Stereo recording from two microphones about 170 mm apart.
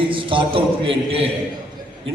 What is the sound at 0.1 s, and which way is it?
A man's voice, 30° right (ahead or behind).